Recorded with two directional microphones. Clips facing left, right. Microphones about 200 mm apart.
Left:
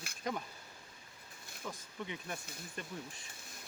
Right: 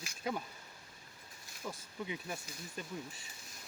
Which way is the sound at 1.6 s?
10° right (ahead or behind).